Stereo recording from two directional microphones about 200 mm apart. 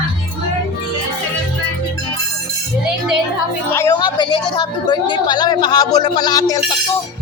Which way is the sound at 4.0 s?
25° left (ahead or behind).